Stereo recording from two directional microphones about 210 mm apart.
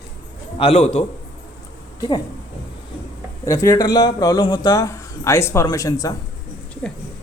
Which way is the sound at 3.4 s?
15° left (ahead or behind).